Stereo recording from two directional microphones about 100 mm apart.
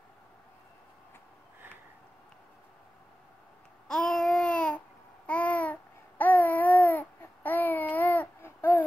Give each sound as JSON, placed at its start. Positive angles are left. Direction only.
{"t": 3.8, "sound": "babbling", "side_deg": 5}